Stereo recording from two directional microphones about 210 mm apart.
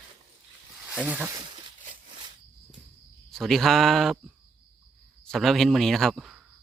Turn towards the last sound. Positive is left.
turn(degrees=0)  # may be behind; listen again after turning